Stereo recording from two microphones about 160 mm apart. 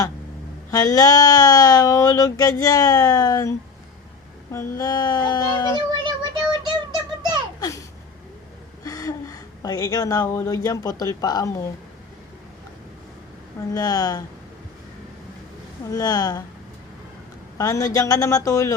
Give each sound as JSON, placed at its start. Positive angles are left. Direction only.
{"t": 0.7, "sound": "speech", "side_deg": 25}
{"t": 4.5, "sound": "speech", "side_deg": 25}
{"t": 6.1, "sound": "a sound", "side_deg": -30}
{"t": 8.8, "sound": "gasp", "side_deg": 20}
{"t": 10.2, "sound": "speech", "side_deg": 20}
{"t": 13.7, "sound": "speech", "side_deg": 25}
{"t": 15.9, "sound": "speech", "side_deg": 25}
{"t": 17.6, "sound": "speech", "side_deg": 20}